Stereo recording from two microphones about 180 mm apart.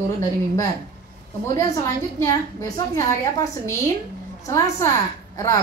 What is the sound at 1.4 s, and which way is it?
A woman's voice, 15° left (ahead or behind).